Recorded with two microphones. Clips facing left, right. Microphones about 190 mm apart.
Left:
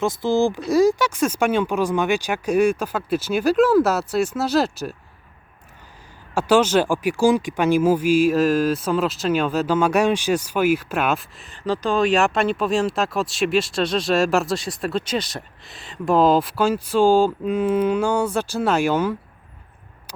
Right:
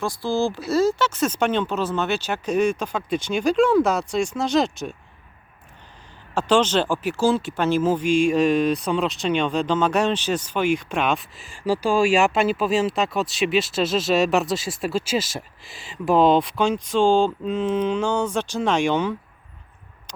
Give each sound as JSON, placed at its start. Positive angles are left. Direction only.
{"t": 0.0, "sound": "speech", "side_deg": 20}
{"t": 6.3, "sound": "speech", "side_deg": 10}
{"t": 11.5, "sound": "speech", "side_deg": -10}